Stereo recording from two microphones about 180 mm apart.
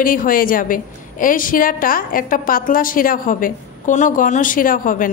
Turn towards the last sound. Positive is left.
turn(degrees=50)  # may be behind; listen again after turning